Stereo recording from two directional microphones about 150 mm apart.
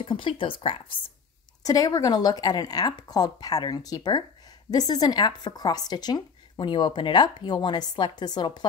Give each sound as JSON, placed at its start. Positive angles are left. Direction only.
{"t": 0.0, "sound": "speech", "side_deg": 35}
{"t": 1.6, "sound": "speech", "side_deg": 25}